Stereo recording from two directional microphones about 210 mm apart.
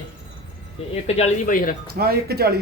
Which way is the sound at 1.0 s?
30° left (ahead or behind).